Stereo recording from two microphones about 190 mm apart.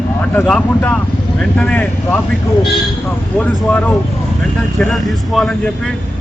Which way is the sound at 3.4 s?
5° left (ahead or behind).